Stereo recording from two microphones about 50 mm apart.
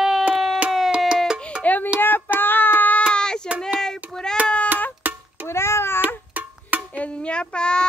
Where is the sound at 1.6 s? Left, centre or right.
Left.